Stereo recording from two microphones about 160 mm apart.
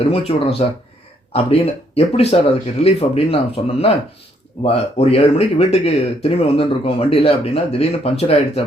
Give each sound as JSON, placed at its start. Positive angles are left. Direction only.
{"t": 0.0, "sound": "speech", "side_deg": 35}